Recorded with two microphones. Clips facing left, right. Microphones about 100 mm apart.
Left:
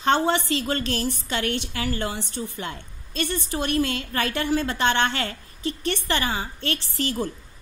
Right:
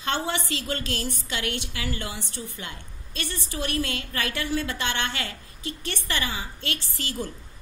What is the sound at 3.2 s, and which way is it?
Speech, 55° left (ahead or behind).